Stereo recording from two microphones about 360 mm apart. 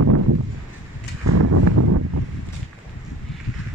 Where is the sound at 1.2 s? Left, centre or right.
Right.